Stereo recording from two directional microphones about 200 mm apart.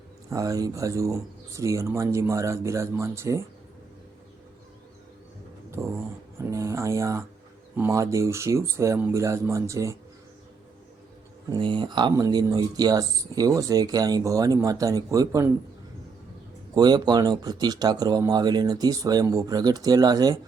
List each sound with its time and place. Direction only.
0.3 s speech: 15° right (ahead or behind)
5.8 s a sound: 15° right (ahead or behind)
7.8 s speech: 15° right (ahead or behind)
11.4 s speech: 25° right (ahead or behind)
16.7 s speech: 20° right (ahead or behind)